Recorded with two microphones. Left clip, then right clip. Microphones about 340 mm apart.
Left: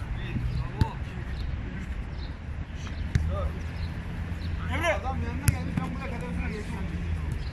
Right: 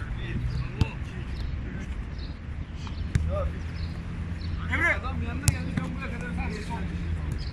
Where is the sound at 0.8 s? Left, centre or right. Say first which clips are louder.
Left 1 dB; centre.